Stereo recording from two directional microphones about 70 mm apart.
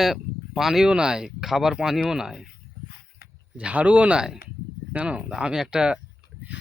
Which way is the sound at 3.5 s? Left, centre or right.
Centre.